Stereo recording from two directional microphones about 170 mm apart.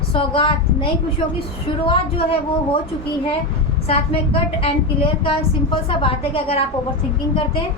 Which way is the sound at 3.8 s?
35° left (ahead or behind).